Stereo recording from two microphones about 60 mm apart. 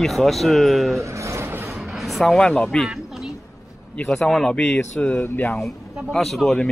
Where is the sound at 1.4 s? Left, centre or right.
Right.